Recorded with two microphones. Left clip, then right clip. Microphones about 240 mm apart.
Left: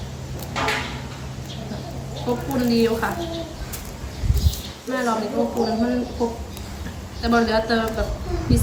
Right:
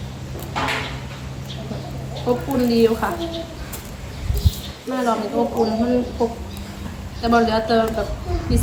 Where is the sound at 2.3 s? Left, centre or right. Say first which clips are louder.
Right 3 dB; centre.